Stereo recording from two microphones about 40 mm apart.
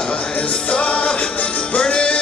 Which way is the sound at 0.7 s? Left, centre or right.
Left.